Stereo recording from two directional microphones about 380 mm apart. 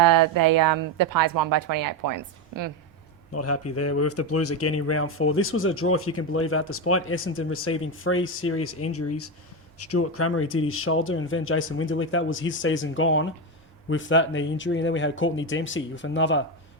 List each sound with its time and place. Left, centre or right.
0.0 s speech: right
3.3 s speech: left